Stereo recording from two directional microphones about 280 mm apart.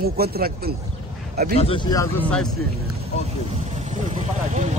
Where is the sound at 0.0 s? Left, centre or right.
Right.